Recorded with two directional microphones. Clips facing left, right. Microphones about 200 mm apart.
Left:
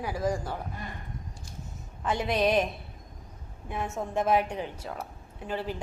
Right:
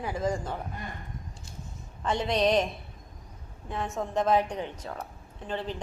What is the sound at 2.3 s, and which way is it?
Speech, 5° left (ahead or behind).